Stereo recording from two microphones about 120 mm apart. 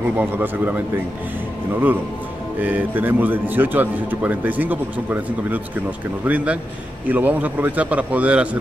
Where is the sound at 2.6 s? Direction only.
15° right (ahead or behind).